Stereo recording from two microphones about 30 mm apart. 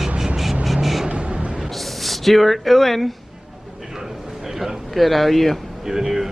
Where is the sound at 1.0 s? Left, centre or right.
Right.